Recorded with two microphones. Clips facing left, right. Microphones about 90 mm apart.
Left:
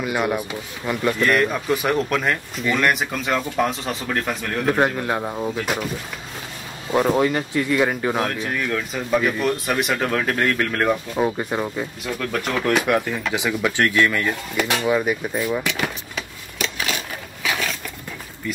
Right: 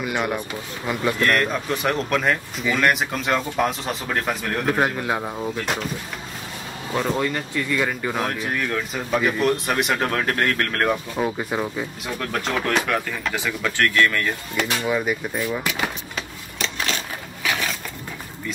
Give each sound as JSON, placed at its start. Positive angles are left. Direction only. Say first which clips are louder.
{"t": 0.0, "sound": "speech", "louder": "left 2 dB", "side_deg": 0}
{"t": 6.9, "sound": "speech", "louder": "left 5 dB", "side_deg": 10}
{"t": 8.3, "sound": "speech", "louder": "left 1 dB", "side_deg": 0}
{"t": 12.6, "sound": "speech", "louder": "left 3 dB", "side_deg": 15}
{"t": 15.6, "sound": "speech", "louder": "even", "side_deg": -5}
{"t": 16.5, "sound": "a sound", "louder": "left 1 dB", "side_deg": 5}
{"t": 17.4, "sound": "a sound", "louder": "even", "side_deg": -5}